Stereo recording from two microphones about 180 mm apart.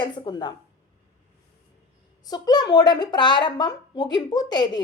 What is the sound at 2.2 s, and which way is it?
A woman's voice, 20° left (ahead or behind).